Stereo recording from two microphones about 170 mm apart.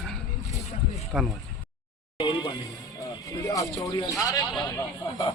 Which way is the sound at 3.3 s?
20° left (ahead or behind).